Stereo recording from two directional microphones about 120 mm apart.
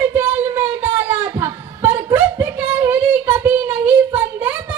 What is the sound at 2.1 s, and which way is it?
Singing, 15° right (ahead or behind).